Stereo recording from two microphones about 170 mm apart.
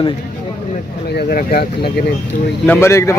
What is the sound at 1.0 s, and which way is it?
Speech, 65° left (ahead or behind).